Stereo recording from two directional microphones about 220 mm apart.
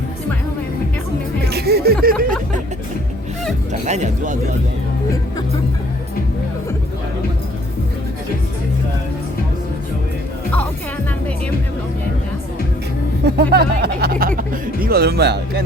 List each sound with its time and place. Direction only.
1.5 s music: 45° right (ahead or behind)
3.7 s speech: 30° right (ahead or behind)
13.2 s speech: 45° right (ahead or behind)